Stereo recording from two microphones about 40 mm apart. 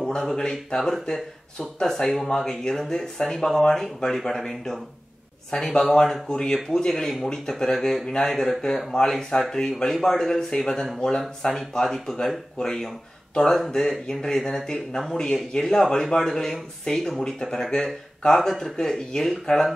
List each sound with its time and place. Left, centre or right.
0.0 s speech: centre